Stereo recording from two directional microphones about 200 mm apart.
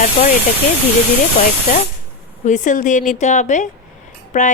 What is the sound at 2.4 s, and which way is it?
A woman's voice, 40° left (ahead or behind).